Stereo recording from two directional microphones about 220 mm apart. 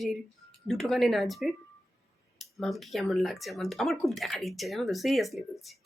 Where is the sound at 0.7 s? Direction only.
Centre (ahead or behind).